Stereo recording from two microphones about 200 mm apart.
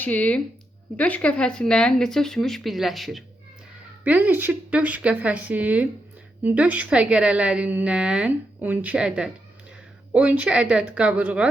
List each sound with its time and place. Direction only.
0.0 s a woman's voice: 5° left (ahead or behind)